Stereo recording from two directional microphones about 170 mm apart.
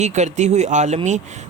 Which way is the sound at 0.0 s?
45° right (ahead or behind).